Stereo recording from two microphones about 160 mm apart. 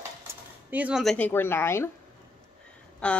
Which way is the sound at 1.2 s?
10° left (ahead or behind).